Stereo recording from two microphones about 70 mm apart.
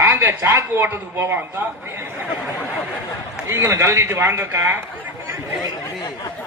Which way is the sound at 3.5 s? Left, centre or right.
Right.